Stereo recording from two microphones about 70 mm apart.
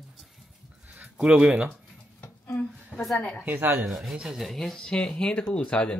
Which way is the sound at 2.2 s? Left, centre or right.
Left.